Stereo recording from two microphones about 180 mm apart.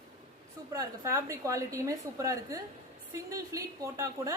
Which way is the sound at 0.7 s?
15° right (ahead or behind).